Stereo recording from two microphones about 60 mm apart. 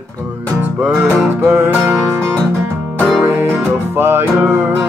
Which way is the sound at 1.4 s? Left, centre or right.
Right.